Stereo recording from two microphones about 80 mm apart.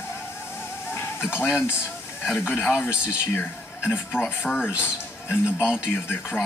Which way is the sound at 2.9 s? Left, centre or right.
Centre.